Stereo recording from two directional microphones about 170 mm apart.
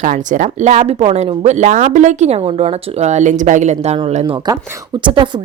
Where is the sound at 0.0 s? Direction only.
50° right (ahead or behind).